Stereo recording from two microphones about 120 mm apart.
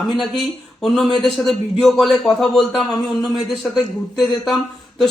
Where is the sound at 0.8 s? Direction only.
5° left (ahead or behind).